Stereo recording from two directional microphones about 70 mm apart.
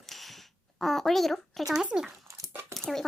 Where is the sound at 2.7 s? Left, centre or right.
Centre.